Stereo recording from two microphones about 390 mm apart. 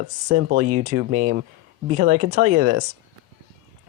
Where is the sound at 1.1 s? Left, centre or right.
Right.